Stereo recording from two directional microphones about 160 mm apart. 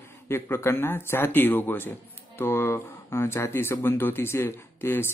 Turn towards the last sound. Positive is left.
turn(degrees=15)  # may be behind; listen again after turning